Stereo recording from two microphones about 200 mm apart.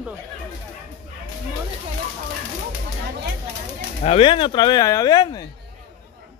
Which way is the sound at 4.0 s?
30° left (ahead or behind).